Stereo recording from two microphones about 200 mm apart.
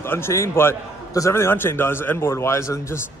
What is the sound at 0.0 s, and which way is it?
A man's voice, 10° left (ahead or behind).